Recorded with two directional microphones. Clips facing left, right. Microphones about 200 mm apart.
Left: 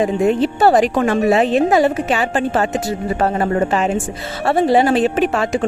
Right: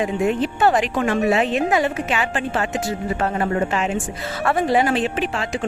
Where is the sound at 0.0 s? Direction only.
35° left (ahead or behind).